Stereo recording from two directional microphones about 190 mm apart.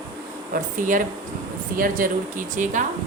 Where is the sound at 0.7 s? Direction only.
45° right (ahead or behind).